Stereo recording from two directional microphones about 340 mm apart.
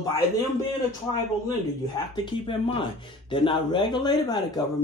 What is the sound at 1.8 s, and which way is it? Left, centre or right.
Speech, centre.